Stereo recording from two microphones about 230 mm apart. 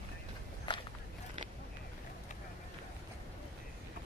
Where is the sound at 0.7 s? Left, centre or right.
Left.